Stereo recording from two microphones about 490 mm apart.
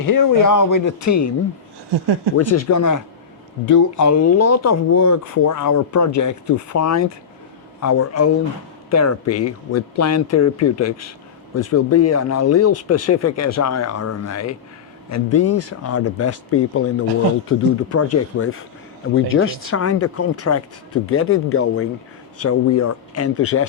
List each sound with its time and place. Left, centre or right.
0.0 s speech: left
2.3 s speech: left